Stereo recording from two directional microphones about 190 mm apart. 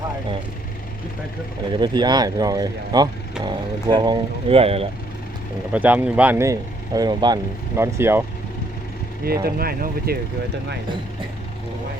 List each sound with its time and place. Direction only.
1.8 s speech: 25° right (ahead or behind)
5.7 s speech: 10° right (ahead or behind)
9.2 s speech: 55° right (ahead or behind)